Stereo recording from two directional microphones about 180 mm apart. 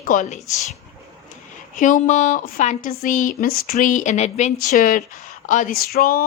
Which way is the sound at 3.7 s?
45° left (ahead or behind).